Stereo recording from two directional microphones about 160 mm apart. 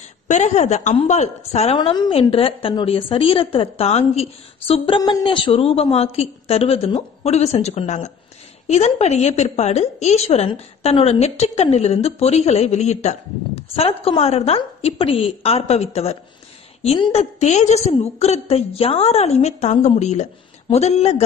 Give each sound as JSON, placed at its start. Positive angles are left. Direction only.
{"t": 0.3, "sound": "a woman's voice", "side_deg": 45}
{"t": 1.8, "sound": "a woman's voice", "side_deg": 30}